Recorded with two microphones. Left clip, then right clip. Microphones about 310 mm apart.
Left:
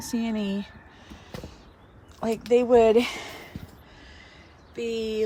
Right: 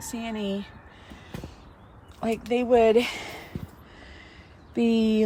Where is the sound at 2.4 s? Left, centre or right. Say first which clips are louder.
Left 2 dB; centre.